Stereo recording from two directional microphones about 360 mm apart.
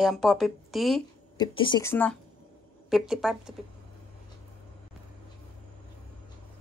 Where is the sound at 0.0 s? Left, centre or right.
Centre.